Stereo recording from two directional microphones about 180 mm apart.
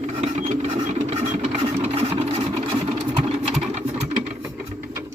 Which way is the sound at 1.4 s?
35° right (ahead or behind).